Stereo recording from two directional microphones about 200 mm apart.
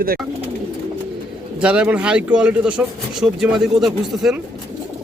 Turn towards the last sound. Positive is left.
turn(degrees=0)  # may be behind; listen again after turning